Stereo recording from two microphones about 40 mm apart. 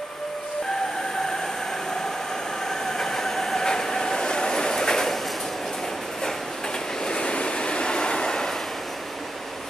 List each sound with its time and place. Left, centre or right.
2.7 s train: centre
7.1 s train: left